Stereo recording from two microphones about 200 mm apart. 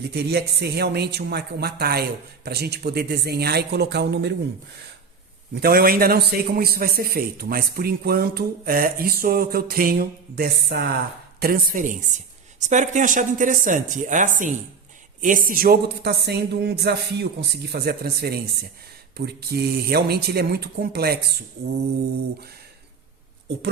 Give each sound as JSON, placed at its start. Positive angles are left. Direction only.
{"t": 0.1, "sound": "a man's voice", "side_deg": -55}
{"t": 5.5, "sound": "a man's voice", "side_deg": -50}